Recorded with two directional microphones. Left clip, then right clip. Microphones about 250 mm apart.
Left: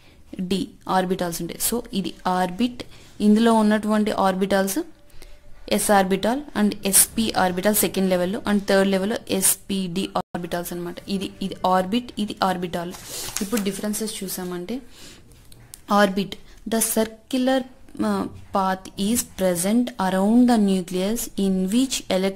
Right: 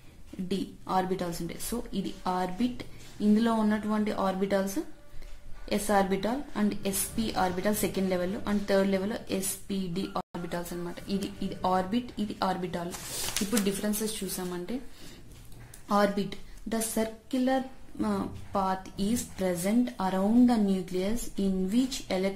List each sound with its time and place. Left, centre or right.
0.5 s a woman's voice: left
5.7 s a woman's voice: left
15.9 s a woman's voice: left